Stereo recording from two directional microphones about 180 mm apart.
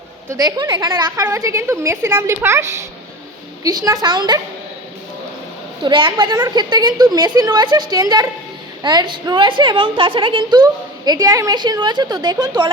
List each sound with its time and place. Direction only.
0.3 s a woman's voice: 20° right (ahead or behind)
5.8 s a woman's voice: 25° right (ahead or behind)